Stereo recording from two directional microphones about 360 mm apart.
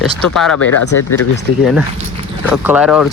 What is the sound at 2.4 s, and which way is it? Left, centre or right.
Speech, centre.